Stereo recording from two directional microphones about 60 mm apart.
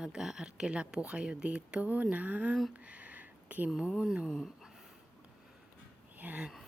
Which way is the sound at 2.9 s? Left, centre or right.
Right.